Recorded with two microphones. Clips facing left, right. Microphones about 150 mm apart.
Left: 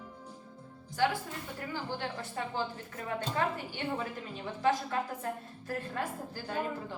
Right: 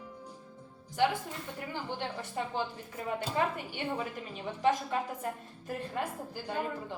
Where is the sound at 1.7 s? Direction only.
15° right (ahead or behind).